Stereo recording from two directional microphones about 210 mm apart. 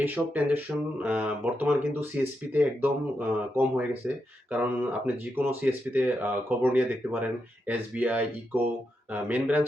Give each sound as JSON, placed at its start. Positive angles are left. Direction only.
{"t": 0.0, "sound": "speech", "side_deg": -10}